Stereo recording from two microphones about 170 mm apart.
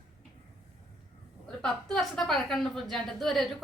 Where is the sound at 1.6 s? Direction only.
5° left (ahead or behind).